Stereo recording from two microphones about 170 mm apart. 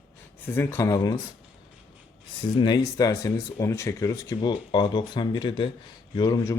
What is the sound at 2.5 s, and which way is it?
Speech, 25° left (ahead or behind).